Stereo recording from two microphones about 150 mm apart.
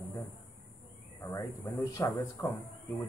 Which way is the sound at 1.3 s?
20° left (ahead or behind).